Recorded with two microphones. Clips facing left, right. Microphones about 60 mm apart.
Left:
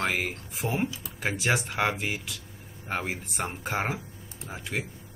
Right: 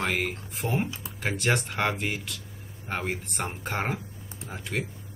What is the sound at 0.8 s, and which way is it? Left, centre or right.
Speech, right.